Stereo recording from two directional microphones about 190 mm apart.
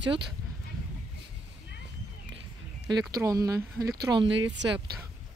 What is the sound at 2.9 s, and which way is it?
Speech, 20° right (ahead or behind).